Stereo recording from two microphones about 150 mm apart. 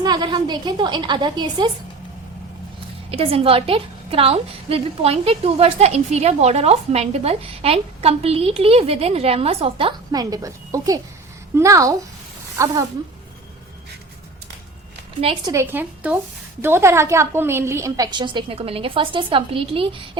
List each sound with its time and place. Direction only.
0.0 s a woman's voice: 30° right (ahead or behind)
3.1 s a woman's voice: 40° right (ahead or behind); by 12.8 s 20° right (ahead or behind)
15.4 s a woman's voice: 15° right (ahead or behind); by 20.0 s 35° right (ahead or behind)